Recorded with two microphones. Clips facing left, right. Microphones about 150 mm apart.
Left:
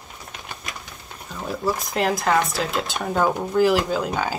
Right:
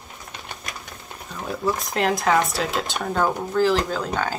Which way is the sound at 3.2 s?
15° left (ahead or behind).